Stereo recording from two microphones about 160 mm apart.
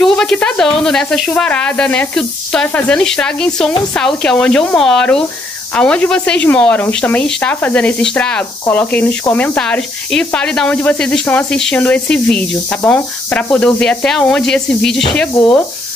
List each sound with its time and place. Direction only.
0.0 s speech: 5° left (ahead or behind)